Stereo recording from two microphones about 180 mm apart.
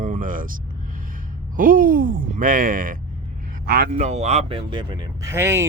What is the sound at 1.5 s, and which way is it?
A man's voice, 50° right (ahead or behind).